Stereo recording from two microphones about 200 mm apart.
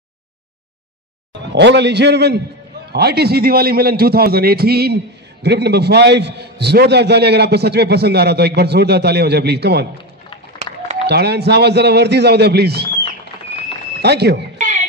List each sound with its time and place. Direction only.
1.5 s a man's voice: 60° right (ahead or behind)
11.1 s a man's voice: 55° right (ahead or behind)
14.0 s a man's voice: 55° right (ahead or behind)
14.6 s music: 35° right (ahead or behind)